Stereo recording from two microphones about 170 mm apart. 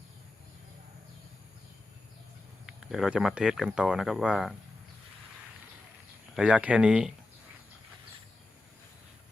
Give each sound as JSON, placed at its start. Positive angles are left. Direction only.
{"t": 2.6, "sound": "speech", "side_deg": -5}
{"t": 6.3, "sound": "speech", "side_deg": -5}